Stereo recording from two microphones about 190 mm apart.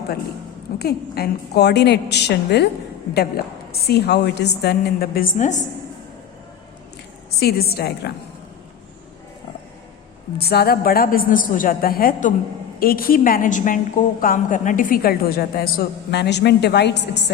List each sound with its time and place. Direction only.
0.8 s a woman's voice: 55° left (ahead or behind); by 5.6 s 40° left (ahead or behind)
7.3 s a woman's voice: 55° left (ahead or behind)
10.3 s a woman's voice: 55° left (ahead or behind)